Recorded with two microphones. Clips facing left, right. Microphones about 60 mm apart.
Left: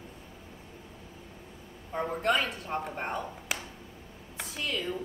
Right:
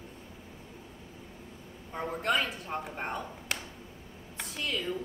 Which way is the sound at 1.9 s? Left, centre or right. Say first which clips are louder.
Left 3 dB; centre.